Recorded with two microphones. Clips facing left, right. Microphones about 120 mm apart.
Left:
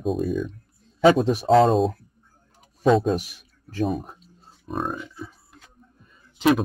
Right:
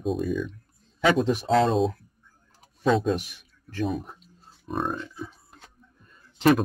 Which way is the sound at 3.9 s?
40° left (ahead or behind).